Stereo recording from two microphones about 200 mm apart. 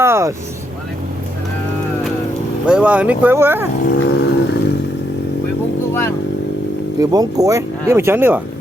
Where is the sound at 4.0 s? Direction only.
55° left (ahead or behind).